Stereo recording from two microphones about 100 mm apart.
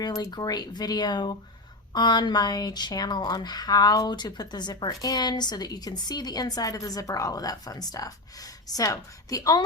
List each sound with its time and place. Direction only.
0.0 s speech: 40° left (ahead or behind)